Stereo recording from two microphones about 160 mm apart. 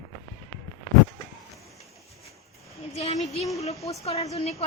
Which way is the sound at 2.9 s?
45° left (ahead or behind).